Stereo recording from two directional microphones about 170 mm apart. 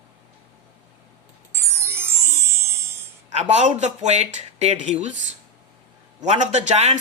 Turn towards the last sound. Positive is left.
turn(degrees=-40)  # may be behind; listen again after turning